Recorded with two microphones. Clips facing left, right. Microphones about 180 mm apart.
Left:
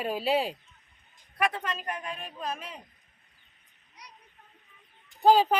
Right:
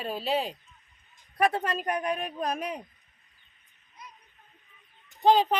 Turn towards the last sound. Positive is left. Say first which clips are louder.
# left 1 dB
turn(degrees=5)  # may be behind; listen again after turning